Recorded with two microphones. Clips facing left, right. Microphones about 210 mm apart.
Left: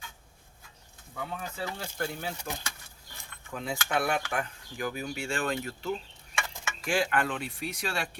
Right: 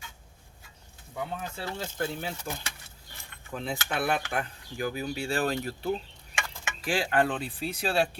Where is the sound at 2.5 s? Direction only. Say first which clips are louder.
Right 1 dB; 50° right (ahead or behind).